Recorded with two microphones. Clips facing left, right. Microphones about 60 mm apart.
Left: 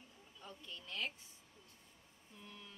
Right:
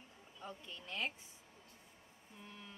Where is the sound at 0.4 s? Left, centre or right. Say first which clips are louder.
Right 3 dB; right.